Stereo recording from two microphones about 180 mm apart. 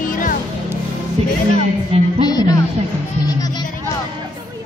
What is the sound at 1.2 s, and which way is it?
Music, 35° right (ahead or behind).